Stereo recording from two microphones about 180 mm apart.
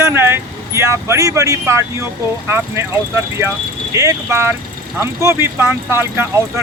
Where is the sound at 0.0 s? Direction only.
15° right (ahead or behind).